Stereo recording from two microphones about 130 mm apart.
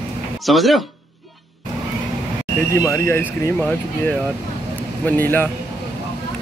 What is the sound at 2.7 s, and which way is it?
Speech, 25° left (ahead or behind).